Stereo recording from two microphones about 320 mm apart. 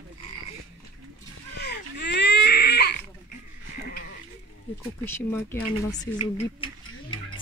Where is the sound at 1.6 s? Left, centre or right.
Left.